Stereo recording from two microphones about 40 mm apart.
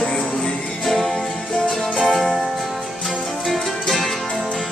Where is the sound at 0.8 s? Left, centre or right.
Centre.